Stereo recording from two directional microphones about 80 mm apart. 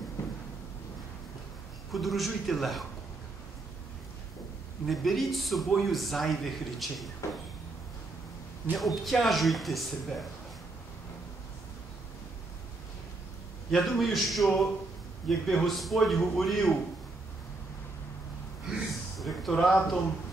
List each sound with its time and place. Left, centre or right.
0.2 s a sound: left
1.9 s a man's voice: centre
4.8 s a man's voice: centre
8.7 s a man's voice: centre
13.7 s a man's voice: centre
19.1 s speech: centre